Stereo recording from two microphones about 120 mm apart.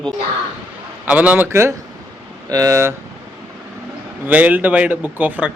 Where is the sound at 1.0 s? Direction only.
10° right (ahead or behind).